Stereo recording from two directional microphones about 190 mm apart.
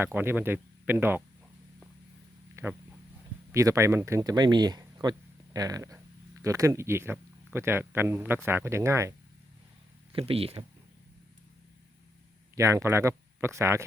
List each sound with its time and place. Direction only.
0.0 s speech: 10° right (ahead or behind)
2.6 s speech: 15° right (ahead or behind)
10.1 s speech: 30° right (ahead or behind)
12.5 s speech: 15° right (ahead or behind)